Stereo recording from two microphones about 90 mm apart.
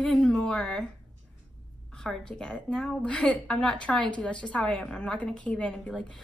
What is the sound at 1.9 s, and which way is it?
A woman's voice, 5° left (ahead or behind).